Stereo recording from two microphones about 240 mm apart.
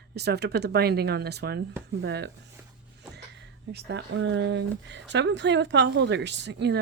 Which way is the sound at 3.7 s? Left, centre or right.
Right.